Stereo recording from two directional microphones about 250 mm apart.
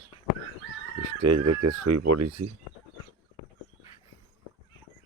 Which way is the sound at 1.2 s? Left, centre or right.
Right.